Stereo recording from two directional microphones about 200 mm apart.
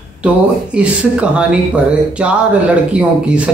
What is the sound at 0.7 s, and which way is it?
Speech, 5° right (ahead or behind).